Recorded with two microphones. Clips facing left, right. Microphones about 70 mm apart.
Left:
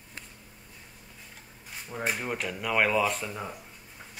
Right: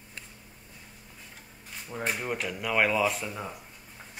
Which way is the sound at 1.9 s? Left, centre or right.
Centre.